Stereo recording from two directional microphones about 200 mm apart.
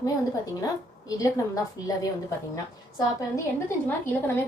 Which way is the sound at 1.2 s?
15° left (ahead or behind).